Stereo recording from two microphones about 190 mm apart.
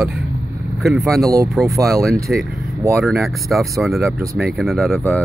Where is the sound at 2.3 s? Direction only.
Centre (ahead or behind).